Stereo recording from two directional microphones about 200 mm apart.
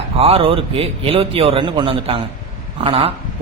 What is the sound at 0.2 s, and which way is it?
A man's voice, 30° right (ahead or behind).